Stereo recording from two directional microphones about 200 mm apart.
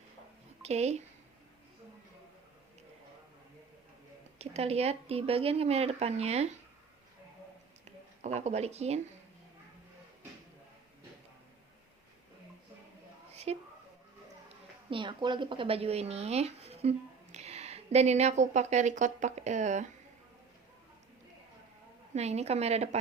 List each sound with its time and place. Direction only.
0.6 s speech: 35° right (ahead or behind)
4.4 s speech: 30° right (ahead or behind)
7.9 s speech: 35° right (ahead or behind)
13.3 s a sound: 30° right (ahead or behind)
14.8 s a woman's voice: 25° right (ahead or behind)
22.1 s speech: 35° right (ahead or behind)